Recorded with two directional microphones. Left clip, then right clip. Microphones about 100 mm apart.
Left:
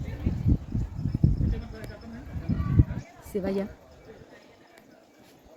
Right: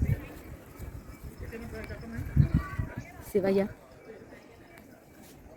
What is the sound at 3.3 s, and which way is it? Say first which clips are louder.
Speech: right 4 dB; 40° right (ahead or behind).